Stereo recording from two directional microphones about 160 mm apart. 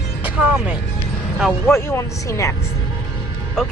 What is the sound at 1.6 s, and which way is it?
Speech, 15° left (ahead or behind).